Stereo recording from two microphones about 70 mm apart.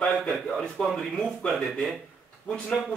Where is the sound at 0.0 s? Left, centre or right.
Centre.